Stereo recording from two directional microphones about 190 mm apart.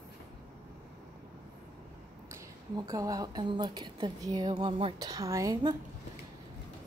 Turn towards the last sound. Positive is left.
turn(degrees=-20)  # may be behind; listen again after turning